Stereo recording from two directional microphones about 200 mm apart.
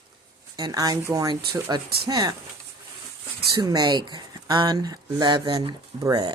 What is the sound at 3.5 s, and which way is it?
Speech, 20° right (ahead or behind).